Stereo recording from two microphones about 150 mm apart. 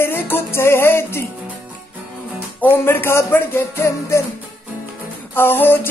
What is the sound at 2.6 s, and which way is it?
Music, 15° left (ahead or behind).